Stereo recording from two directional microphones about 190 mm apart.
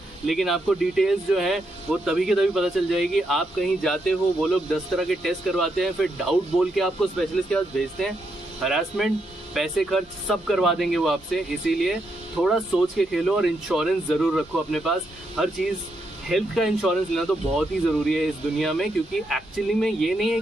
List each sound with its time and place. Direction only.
0.3 s speech: centre (ahead or behind)